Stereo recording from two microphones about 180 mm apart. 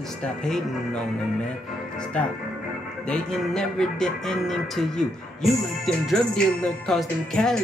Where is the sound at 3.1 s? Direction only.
5° left (ahead or behind).